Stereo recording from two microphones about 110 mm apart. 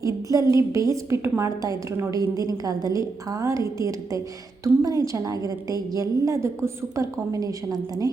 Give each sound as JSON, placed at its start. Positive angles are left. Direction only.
{"t": 0.0, "sound": "a woman's voice", "side_deg": -30}